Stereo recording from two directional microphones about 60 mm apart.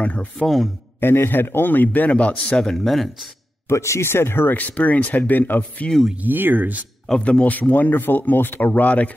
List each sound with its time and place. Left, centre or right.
0.0 s a man's voice: left
1.0 s a man's voice: left; by 3.1 s centre
3.6 s a man's voice: left; by 5.9 s centre
6.2 s speech: right
7.2 s a man's voice: centre